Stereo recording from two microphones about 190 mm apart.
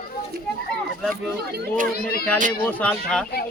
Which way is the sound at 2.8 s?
5° left (ahead or behind).